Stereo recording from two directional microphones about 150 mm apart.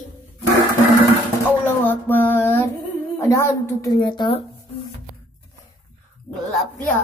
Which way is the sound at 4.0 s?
30° left (ahead or behind).